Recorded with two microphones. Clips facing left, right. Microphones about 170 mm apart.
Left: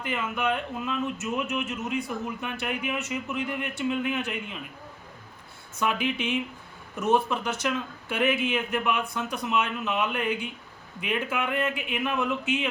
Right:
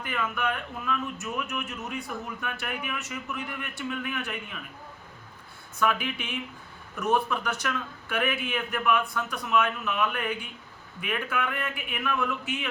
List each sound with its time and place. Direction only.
0.0 s a man's voice: 20° left (ahead or behind)
5.8 s a man's voice: 20° left (ahead or behind)